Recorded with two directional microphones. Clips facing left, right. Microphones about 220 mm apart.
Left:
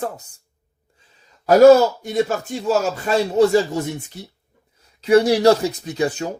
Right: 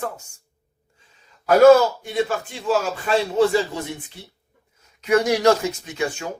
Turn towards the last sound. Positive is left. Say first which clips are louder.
# left 5 dB
turn(degrees=35)  # may be behind; listen again after turning